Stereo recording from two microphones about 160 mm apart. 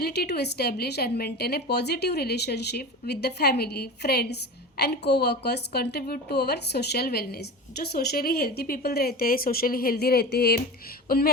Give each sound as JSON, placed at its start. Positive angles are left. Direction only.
{"t": 0.0, "sound": "a woman's voice", "side_deg": 85}